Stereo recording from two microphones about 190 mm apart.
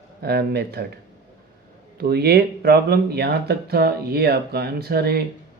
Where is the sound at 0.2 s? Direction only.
55° right (ahead or behind).